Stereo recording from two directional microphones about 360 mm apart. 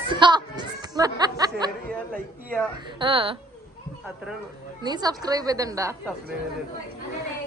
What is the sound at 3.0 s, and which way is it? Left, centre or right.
Speech, centre.